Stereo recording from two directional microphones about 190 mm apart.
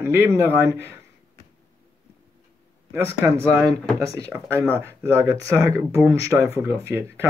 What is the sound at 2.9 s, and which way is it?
Speech, 15° right (ahead or behind).